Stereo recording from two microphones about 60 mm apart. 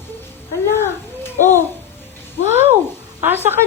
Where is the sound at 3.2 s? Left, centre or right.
Right.